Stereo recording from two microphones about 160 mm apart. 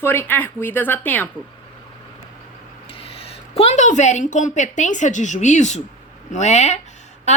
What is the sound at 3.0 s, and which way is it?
A woman's voice, 35° left (ahead or behind).